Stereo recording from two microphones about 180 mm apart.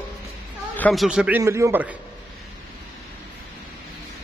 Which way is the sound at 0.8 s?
Centre (ahead or behind).